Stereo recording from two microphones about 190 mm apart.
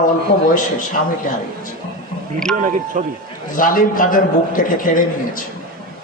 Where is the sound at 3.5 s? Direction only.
45° left (ahead or behind).